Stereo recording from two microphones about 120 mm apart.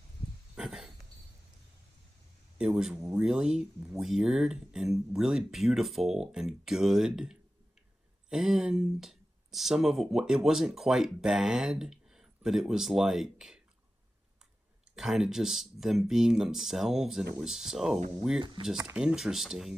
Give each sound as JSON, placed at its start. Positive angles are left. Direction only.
{"t": 0.6, "sound": "a sound", "side_deg": -5}
{"t": 2.6, "sound": "speech", "side_deg": -5}
{"t": 15.0, "sound": "speech", "side_deg": 0}
{"t": 18.4, "sound": "speech", "side_deg": -45}
{"t": 18.9, "sound": "speech", "side_deg": -5}